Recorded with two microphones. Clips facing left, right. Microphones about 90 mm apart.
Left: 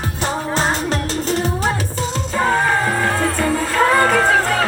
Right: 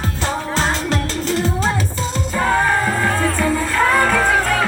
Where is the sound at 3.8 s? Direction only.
5° left (ahead or behind).